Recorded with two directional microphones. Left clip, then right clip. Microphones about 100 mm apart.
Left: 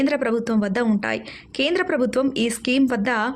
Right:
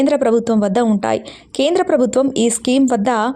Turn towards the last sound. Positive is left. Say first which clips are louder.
# right 6 dB
turn(degrees=-45)  # may be behind; listen again after turning